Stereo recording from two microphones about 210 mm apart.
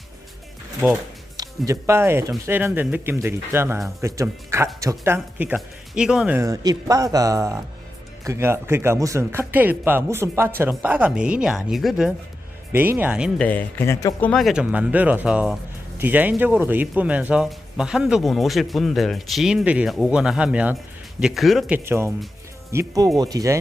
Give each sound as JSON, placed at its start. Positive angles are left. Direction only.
{"t": 1.4, "sound": "speech", "side_deg": -15}
{"t": 13.4, "sound": "speech", "side_deg": 10}
{"t": 21.8, "sound": "speech", "side_deg": -15}